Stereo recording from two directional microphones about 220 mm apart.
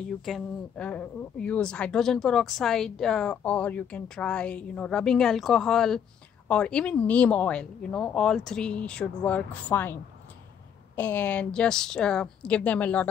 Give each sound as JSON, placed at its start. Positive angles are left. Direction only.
{"t": 0.2, "sound": "speech", "side_deg": 5}
{"t": 11.0, "sound": "speech", "side_deg": 5}